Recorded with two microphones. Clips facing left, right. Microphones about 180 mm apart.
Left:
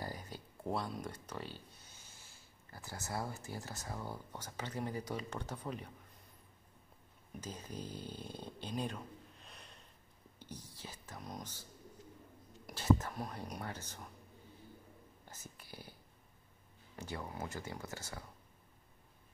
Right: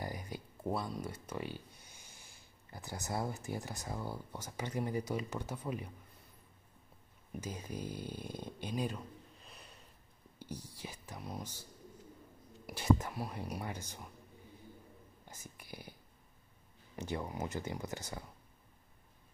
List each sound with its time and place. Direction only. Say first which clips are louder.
0.0 s a sound: right 3 dB; 15° right (ahead or behind)
0.7 s speech: right 1 dB; centre (ahead or behind)
7.3 s speech: right 3 dB; 10° right (ahead or behind)
12.6 s speech: right 1 dB; 15° right (ahead or behind)
15.2 s whispering: right 1 dB; 15° right (ahead or behind)
16.9 s speech: right 5 dB; 20° right (ahead or behind)